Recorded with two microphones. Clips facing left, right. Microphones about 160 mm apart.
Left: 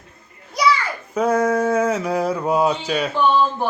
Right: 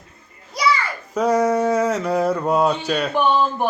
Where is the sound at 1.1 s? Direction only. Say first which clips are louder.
Even; centre (ahead or behind).